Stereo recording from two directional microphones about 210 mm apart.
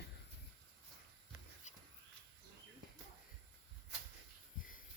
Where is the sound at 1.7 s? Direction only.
35° left (ahead or behind).